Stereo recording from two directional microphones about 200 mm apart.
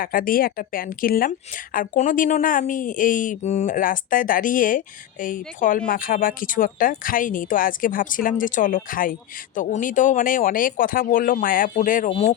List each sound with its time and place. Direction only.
0.0 s speech: 45° left (ahead or behind)